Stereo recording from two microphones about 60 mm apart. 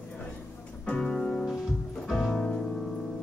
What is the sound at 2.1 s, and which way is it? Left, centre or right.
Music, centre.